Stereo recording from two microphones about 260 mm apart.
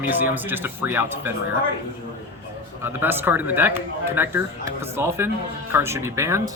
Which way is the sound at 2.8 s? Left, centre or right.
Centre.